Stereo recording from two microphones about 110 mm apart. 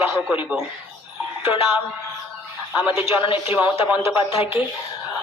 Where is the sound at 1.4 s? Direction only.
55° left (ahead or behind).